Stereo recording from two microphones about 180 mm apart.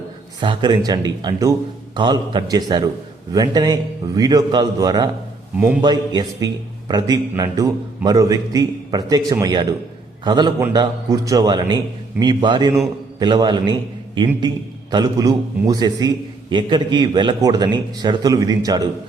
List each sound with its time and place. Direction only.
0.4 s a man's voice: 25° right (ahead or behind)
5.5 s a man's voice: 10° right (ahead or behind)
5.8 s a man's voice: 25° right (ahead or behind)